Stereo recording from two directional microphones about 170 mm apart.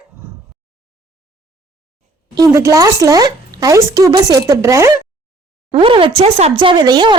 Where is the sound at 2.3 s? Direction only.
20° right (ahead or behind).